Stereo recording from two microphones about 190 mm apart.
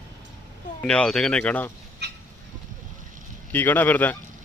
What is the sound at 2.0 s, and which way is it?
Goose, 60° right (ahead or behind).